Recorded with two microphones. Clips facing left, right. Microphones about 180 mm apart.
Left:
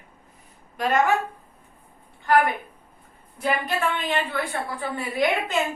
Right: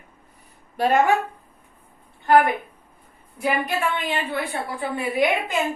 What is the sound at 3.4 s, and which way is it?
A woman's voice, 10° right (ahead or behind).